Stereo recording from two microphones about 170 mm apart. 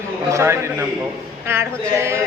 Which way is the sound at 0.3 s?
15° right (ahead or behind).